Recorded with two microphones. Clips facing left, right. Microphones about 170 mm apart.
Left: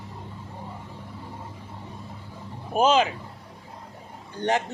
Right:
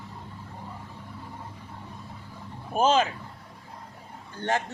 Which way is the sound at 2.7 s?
15° left (ahead or behind).